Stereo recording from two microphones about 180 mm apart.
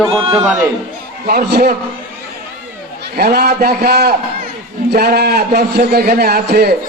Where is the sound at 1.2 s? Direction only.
55° right (ahead or behind).